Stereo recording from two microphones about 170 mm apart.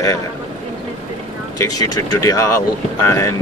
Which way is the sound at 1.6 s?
20° left (ahead or behind).